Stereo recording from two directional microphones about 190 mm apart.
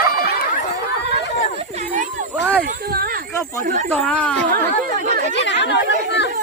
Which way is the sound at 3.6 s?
45° right (ahead or behind).